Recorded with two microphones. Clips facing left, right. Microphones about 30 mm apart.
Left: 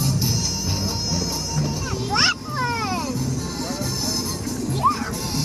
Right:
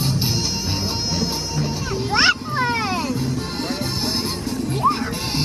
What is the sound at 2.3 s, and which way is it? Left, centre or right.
Dog, right.